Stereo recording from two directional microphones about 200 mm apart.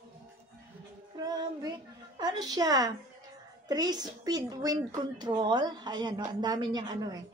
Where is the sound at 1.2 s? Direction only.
20° right (ahead or behind).